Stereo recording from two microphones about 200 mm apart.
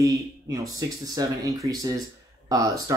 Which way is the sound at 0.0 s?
15° right (ahead or behind).